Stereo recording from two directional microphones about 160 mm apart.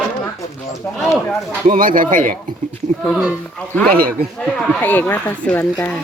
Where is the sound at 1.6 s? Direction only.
60° right (ahead or behind).